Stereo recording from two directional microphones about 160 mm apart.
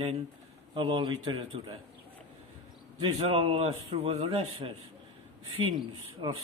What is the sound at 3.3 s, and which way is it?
A man's voice, 40° right (ahead or behind).